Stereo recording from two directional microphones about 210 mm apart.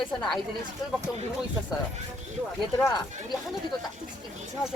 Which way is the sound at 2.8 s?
15° left (ahead or behind).